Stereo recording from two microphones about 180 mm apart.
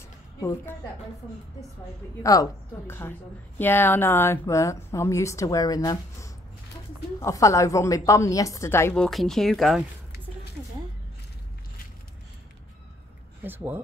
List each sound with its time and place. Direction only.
0.4 s a woman's voice: 15° left (ahead or behind)
2.3 s a woman's voice: 20° left (ahead or behind); by 9.8 s centre (ahead or behind)
13.4 s speech: 10° right (ahead or behind)